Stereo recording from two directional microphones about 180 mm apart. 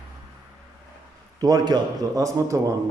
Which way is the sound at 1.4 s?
20° right (ahead or behind).